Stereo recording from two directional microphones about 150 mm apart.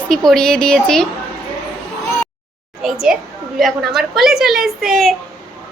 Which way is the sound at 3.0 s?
5° right (ahead or behind).